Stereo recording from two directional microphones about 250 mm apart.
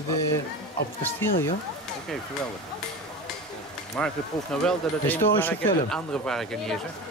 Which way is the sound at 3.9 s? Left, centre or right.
Centre.